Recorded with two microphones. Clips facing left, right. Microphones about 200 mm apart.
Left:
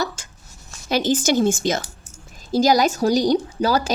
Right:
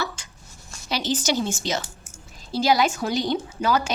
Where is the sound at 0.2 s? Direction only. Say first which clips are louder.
Left 2 dB; 45° left (ahead or behind).